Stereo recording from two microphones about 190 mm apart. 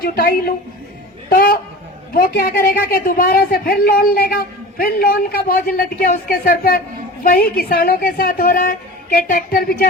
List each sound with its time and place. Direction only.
0.0 s a woman's voice: 50° left (ahead or behind)